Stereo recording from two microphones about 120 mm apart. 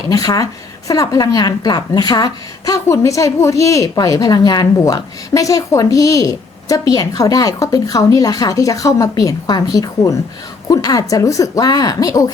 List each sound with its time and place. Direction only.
0.1 s a woman's voice: 30° left (ahead or behind)